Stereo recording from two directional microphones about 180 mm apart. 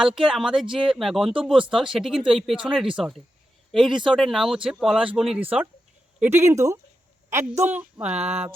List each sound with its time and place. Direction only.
0.0 s a woman's voice: 5° right (ahead or behind)